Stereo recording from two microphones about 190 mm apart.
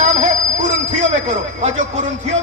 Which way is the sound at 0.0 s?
40° right (ahead or behind).